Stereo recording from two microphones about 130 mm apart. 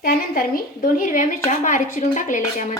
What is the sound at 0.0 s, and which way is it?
A woman's voice, 90° left.